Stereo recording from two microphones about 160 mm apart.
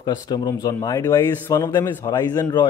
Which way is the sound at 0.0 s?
25° left (ahead or behind).